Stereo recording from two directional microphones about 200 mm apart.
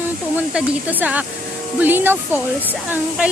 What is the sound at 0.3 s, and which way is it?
Speech, 10° right (ahead or behind).